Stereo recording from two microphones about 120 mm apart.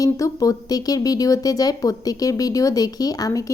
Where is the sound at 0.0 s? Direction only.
30° left (ahead or behind).